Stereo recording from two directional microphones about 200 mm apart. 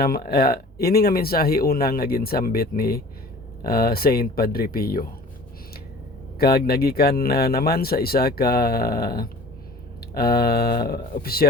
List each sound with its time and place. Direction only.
0.0 s speech: 50° left (ahead or behind)
6.4 s speech: 50° left (ahead or behind)